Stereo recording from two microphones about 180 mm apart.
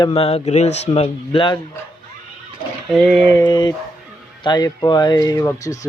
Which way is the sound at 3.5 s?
25° left (ahead or behind).